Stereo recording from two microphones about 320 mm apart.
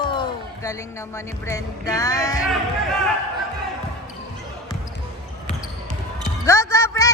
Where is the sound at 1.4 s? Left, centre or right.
Centre.